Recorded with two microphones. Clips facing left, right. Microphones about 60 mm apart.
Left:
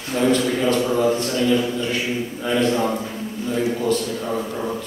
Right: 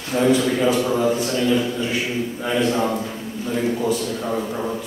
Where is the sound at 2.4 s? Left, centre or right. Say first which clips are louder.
Left 1 dB; centre.